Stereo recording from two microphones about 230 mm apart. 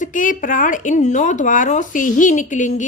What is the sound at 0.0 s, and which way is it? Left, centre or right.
Speech, left.